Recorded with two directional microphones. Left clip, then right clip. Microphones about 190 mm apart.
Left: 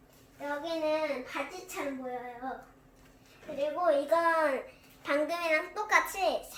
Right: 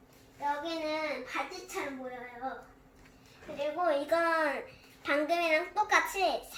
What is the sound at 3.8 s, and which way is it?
A woman's voice, 20° left (ahead or behind).